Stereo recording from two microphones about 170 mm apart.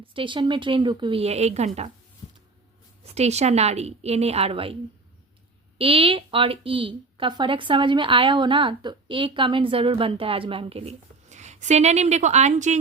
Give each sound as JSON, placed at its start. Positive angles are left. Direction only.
{"t": 0.0, "sound": "a woman's voice", "side_deg": -30}
{"t": 3.0, "sound": "a woman's voice", "side_deg": -40}